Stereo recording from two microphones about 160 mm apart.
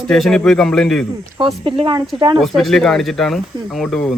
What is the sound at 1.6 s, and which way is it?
Speech, 30° right (ahead or behind).